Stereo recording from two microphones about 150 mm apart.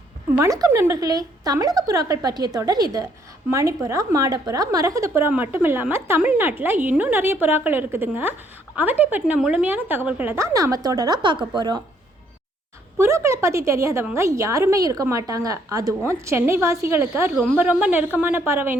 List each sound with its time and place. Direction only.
0.3 s a woman's voice: 20° right (ahead or behind)
13.0 s a woman's voice: 20° right (ahead or behind)
17.3 s a woman's voice: centre (ahead or behind); by 18.8 s 15° right (ahead or behind)